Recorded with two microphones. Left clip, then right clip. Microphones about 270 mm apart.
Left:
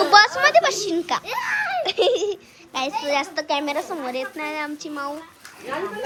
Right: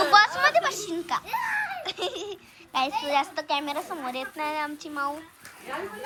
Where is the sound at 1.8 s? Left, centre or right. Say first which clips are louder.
Left 12 dB; centre.